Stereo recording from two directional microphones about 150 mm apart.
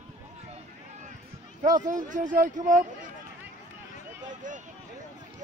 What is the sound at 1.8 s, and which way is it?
Speech, 60° right (ahead or behind).